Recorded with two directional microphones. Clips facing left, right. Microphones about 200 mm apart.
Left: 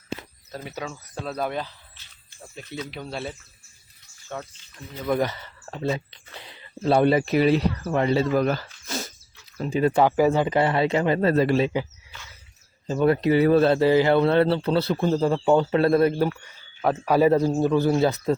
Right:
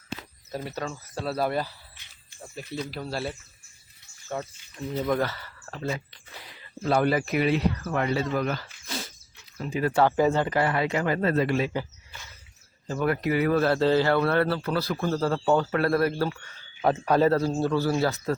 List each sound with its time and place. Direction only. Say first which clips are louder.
0.6 s speech: left 1 dB; centre (ahead or behind)
5.0 s speech: left 5 dB; 15° left (ahead or behind)
8.4 s a sound: left 5 dB; 40° left (ahead or behind)
9.6 s a man's voice: left 3 dB; 30° left (ahead or behind)
12.9 s a man's voice: left 6 dB; 25° left (ahead or behind)
13.7 s a man's voice: left 4 dB; 15° left (ahead or behind)
16.8 s a man's voice: left 2 dB; 5° left (ahead or behind)